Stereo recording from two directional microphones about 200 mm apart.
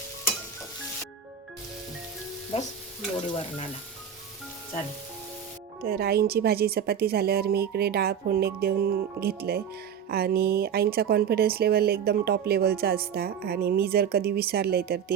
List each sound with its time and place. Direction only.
2.5 s stir: 30° left (ahead or behind)
5.8 s speech: 50° right (ahead or behind)